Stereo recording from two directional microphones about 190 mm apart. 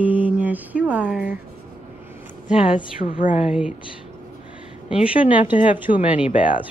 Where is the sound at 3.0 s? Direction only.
45° left (ahead or behind).